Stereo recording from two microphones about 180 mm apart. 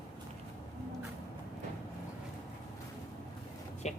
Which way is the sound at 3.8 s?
40° left (ahead or behind).